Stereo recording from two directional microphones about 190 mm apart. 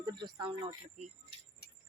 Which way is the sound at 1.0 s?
40° right (ahead or behind).